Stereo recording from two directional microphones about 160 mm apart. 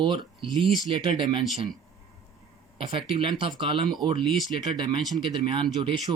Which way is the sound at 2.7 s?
30° right (ahead or behind).